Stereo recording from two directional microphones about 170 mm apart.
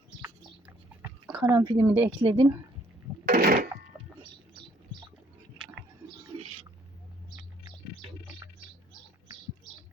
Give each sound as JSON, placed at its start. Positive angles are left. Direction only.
{"t": 1.5, "sound": "speech", "side_deg": -25}
{"t": 1.8, "sound": "speech", "side_deg": -10}
{"t": 2.2, "sound": "speech", "side_deg": -35}
{"t": 3.2, "sound": "a sound", "side_deg": -65}
{"t": 3.9, "sound": "a sound", "side_deg": -15}
{"t": 5.6, "sound": "chewing", "side_deg": -5}